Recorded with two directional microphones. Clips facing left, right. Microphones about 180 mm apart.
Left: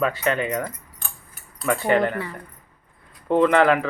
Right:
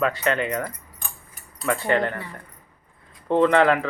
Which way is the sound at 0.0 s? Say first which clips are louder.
Even; 10° left (ahead or behind).